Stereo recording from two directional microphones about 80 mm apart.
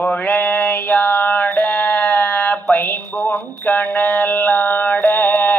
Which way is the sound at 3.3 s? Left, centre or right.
Left.